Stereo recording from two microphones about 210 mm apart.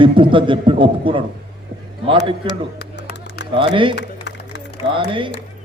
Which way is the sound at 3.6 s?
25° right (ahead or behind).